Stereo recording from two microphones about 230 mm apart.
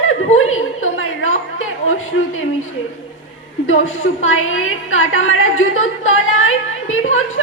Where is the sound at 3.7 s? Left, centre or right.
Left.